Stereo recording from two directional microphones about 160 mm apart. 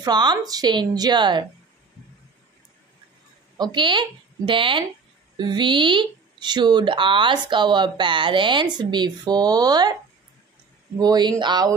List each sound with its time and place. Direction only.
0.0 s speech: 25° right (ahead or behind)
3.5 s a woman's voice: 30° right (ahead or behind)
11.0 s speech: 25° right (ahead or behind)